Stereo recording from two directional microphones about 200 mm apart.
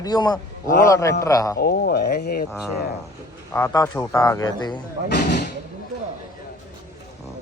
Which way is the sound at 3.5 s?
15° left (ahead or behind).